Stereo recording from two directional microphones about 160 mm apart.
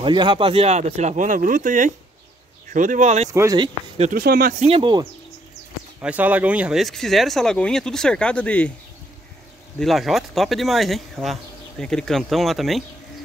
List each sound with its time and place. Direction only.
0.0 s speech: 30° right (ahead or behind); by 3.3 s 45° right (ahead or behind)
3.3 s speech: 20° right (ahead or behind)
4.1 s speech: 70° right (ahead or behind)
4.6 s speech: 35° right (ahead or behind)
5.9 s speech: 10° right (ahead or behind); by 8.7 s 5° left (ahead or behind)
9.8 s speech: centre (ahead or behind)